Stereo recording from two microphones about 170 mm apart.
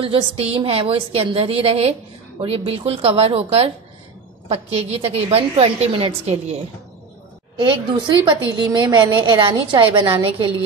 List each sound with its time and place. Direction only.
0.0 s a woman's voice: 35° right (ahead or behind)